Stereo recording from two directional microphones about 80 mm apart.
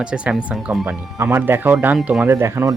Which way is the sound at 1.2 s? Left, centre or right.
Right.